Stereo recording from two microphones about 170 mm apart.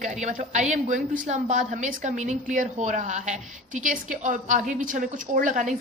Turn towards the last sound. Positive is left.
turn(degrees=-45)  # may be behind; listen again after turning